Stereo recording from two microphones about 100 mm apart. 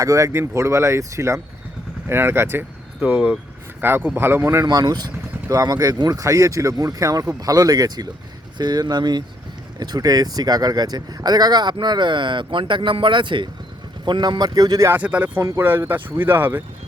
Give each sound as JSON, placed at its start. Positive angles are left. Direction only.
{"t": 0.0, "sound": "speech", "side_deg": -30}
{"t": 4.6, "sound": "speech", "side_deg": -40}
{"t": 14.8, "sound": "speech", "side_deg": -15}
{"t": 15.4, "sound": "speech", "side_deg": -30}